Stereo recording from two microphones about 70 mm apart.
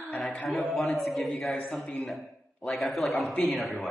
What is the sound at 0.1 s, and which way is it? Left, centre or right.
A man's voice, centre.